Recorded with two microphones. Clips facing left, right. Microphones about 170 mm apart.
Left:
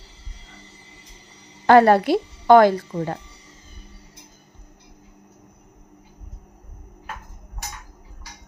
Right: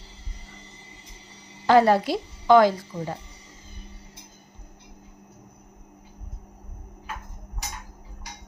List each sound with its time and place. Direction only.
1.6 s speech: 60° left (ahead or behind)